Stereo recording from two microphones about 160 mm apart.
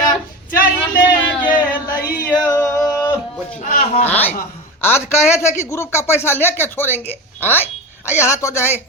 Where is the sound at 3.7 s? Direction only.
60° left (ahead or behind).